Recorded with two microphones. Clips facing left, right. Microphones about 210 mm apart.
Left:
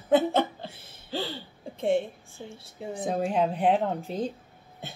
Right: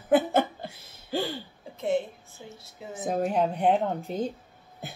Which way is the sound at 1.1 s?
10° right (ahead or behind).